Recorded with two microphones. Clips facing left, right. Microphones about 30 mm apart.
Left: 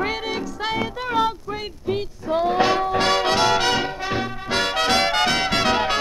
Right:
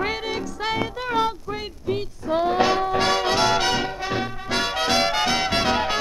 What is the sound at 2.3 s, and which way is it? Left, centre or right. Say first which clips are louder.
Music: left 1 dB; centre.